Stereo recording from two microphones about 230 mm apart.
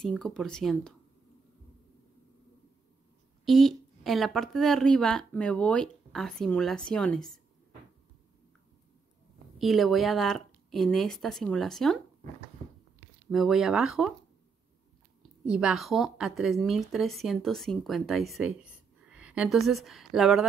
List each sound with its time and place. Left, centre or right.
0.0 s speech: centre
3.4 s speech: centre
9.6 s speech: centre
13.3 s speech: centre
15.4 s a woman's voice: centre